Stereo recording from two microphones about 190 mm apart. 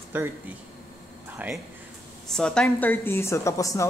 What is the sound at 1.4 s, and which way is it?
Speech, 10° right (ahead or behind).